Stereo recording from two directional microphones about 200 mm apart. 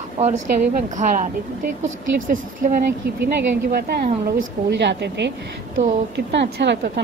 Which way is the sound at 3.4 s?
50° right (ahead or behind).